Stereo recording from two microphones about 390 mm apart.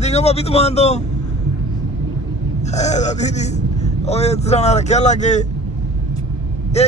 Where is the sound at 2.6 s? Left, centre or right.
Centre.